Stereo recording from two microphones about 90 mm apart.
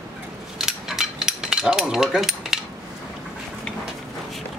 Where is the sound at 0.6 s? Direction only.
5° right (ahead or behind).